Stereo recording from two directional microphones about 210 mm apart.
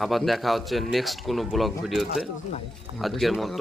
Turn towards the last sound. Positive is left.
turn(degrees=0)  # may be behind; listen again after turning